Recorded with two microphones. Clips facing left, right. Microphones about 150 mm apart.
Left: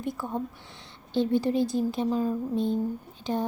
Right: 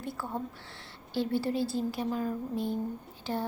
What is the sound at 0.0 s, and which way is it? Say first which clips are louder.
A woman's voice: left 4 dB; 15° left (ahead or behind).